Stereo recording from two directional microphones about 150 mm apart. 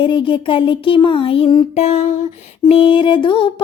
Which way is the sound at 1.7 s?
45° left (ahead or behind).